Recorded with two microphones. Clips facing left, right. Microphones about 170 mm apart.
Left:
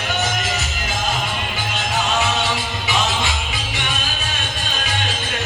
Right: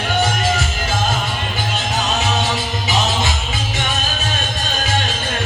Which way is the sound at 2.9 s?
40° right (ahead or behind).